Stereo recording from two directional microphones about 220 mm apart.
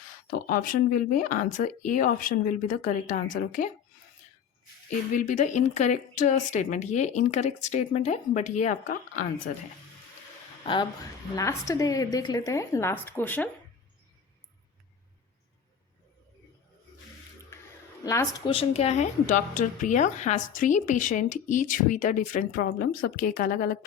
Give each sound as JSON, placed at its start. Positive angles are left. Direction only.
{"t": 0.3, "sound": "a woman's voice", "side_deg": 40}
{"t": 5.1, "sound": "a woman's voice", "side_deg": 35}
{"t": 11.3, "sound": "a woman's voice", "side_deg": 15}
{"t": 18.0, "sound": "a woman's voice", "side_deg": 15}
{"t": 18.4, "sound": "a woman's voice", "side_deg": 25}